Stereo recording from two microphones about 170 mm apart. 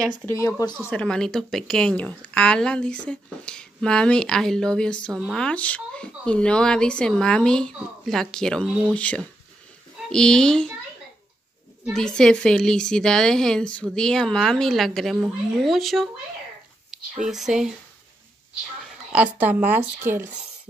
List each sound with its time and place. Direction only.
0.0 s speech: 20° right (ahead or behind)
0.4 s speech: 20° left (ahead or behind)
0.8 s a woman's voice: 5° left (ahead or behind)
11.8 s a woman's voice: 5° left (ahead or behind)
17.2 s a woman's voice: centre (ahead or behind)
19.3 s speech: 10° right (ahead or behind)